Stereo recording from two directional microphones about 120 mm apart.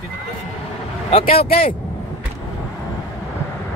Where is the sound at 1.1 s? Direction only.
55° left (ahead or behind).